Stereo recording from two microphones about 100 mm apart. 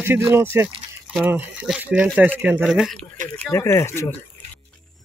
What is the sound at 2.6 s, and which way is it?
Speech, 5° right (ahead or behind).